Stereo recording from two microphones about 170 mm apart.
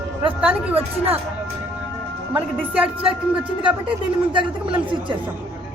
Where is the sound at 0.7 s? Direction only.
35° right (ahead or behind).